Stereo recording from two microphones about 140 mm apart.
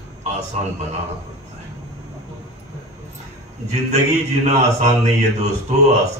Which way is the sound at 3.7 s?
50° right (ahead or behind).